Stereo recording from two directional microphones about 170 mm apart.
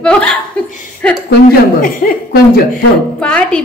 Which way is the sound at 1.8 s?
60° left (ahead or behind).